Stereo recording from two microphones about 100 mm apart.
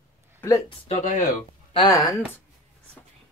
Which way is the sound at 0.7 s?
90° left.